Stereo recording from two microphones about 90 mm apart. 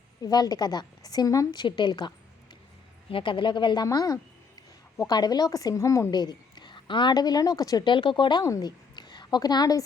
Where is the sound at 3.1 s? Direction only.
75° left (ahead or behind); by 3.8 s 60° left (ahead or behind).